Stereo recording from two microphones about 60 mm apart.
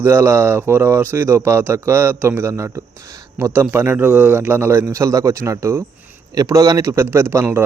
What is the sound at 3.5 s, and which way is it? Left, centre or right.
Speech, right.